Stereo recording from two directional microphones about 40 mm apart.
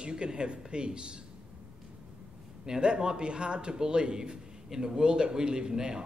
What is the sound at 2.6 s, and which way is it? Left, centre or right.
A man's voice, right.